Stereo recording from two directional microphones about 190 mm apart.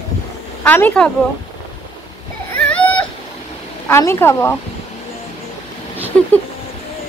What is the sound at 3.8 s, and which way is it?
Speech, 15° left (ahead or behind).